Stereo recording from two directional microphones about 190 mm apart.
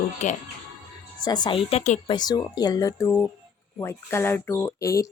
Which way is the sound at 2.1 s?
20° left (ahead or behind).